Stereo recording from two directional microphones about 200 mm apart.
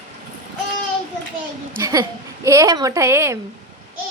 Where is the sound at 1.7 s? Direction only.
15° right (ahead or behind).